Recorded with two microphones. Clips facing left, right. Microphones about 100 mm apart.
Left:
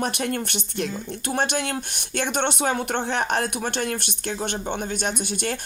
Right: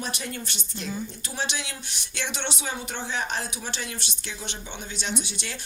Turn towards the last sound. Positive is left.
turn(degrees=50)  # may be behind; listen again after turning